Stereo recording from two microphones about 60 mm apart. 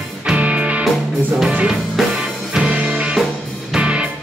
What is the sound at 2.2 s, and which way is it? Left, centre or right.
Music, centre.